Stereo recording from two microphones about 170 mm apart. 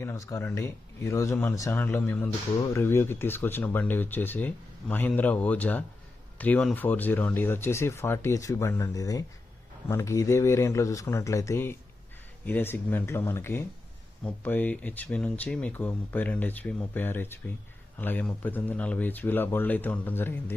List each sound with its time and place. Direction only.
0.0 s speech: 15° left (ahead or behind)